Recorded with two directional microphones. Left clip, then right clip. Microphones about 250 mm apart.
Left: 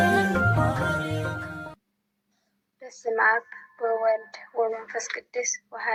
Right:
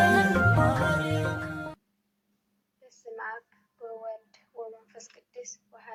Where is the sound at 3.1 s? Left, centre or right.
Left.